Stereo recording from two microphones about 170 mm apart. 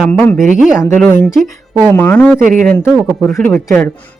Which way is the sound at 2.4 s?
50° right (ahead or behind).